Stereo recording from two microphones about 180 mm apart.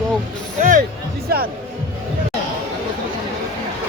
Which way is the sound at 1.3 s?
60° right (ahead or behind).